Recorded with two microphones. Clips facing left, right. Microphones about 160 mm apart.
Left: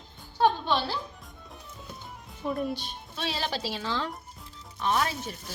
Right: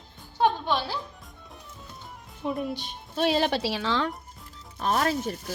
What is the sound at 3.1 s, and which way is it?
Speech, 55° right (ahead or behind).